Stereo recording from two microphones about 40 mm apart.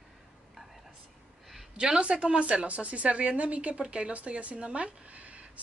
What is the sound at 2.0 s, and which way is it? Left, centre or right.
A woman's voice, right.